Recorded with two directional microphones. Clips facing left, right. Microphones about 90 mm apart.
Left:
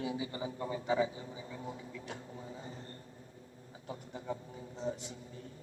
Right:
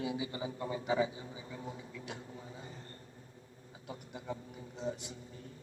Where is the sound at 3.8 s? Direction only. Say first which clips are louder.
Left 2 dB; 35° left (ahead or behind).